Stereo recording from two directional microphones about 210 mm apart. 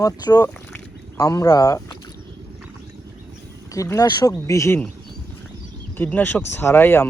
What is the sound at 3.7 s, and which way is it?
Speech, 15° left (ahead or behind).